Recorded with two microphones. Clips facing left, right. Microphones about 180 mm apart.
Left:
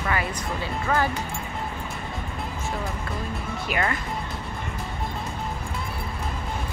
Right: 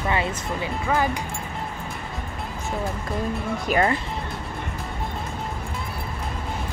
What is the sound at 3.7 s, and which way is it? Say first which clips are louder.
Speech: right 6 dB; 40° right (ahead or behind).